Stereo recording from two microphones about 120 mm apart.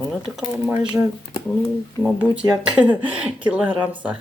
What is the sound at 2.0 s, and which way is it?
Speech, 15° right (ahead or behind).